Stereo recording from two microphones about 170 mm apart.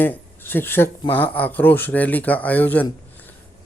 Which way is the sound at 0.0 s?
10° left (ahead or behind).